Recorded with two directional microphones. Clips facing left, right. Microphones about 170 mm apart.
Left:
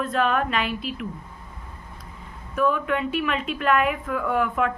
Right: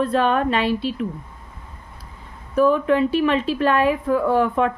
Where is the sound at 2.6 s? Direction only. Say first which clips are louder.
Right 7 dB; 35° right (ahead or behind).